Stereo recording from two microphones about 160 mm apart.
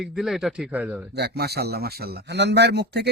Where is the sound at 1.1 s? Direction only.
90° right.